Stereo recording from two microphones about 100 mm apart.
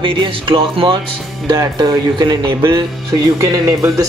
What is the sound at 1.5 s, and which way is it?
Speech, 35° right (ahead or behind).